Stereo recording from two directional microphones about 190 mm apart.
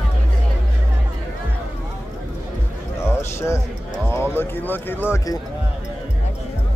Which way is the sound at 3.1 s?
15° left (ahead or behind).